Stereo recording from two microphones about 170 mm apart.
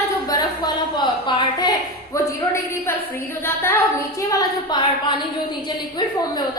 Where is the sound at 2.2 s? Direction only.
15° left (ahead or behind).